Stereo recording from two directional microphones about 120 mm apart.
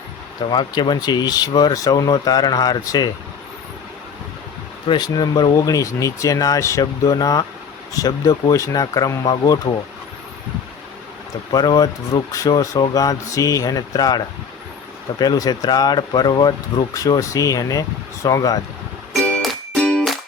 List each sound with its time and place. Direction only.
0.5 s speech: 40° left (ahead or behind)
4.9 s speech: 35° left (ahead or behind)
11.5 s speech: 35° left (ahead or behind)
15.2 s speech: 35° left (ahead or behind)
19.4 s music: 5° left (ahead or behind)